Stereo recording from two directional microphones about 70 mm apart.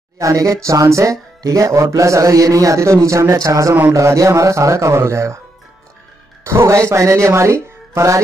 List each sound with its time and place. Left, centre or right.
0.2 s a man's voice: right
6.4 s speech: right